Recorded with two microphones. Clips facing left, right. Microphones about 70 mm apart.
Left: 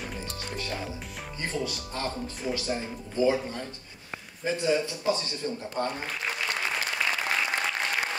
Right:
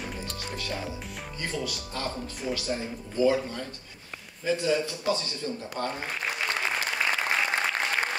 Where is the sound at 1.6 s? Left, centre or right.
Left.